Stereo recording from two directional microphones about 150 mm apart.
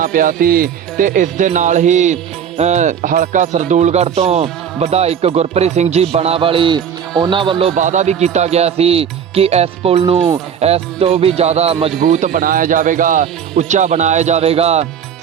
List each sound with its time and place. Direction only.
0.0 s speech: 65° right (ahead or behind); by 7.5 s 35° right (ahead or behind)
7.8 s speech: 55° right (ahead or behind)
11.9 s speech: 60° right (ahead or behind); by 14.8 s 45° right (ahead or behind)